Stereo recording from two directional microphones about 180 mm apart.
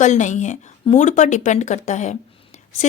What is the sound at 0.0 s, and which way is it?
Speech, 40° left (ahead or behind).